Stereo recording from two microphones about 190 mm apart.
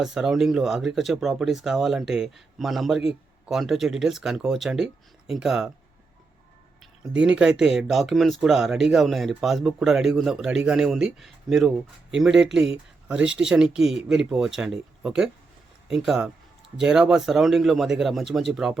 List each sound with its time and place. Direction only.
0.0 s speech: centre (ahead or behind)
7.1 s speech: 5° right (ahead or behind)